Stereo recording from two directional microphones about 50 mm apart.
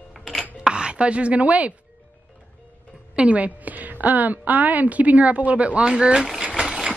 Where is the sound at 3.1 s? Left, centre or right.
Right.